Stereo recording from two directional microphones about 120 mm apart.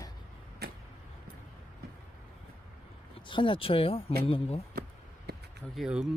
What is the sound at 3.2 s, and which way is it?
Speech, 45° left (ahead or behind).